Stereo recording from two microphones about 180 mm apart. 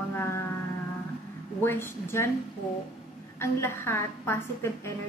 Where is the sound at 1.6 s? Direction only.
10° left (ahead or behind).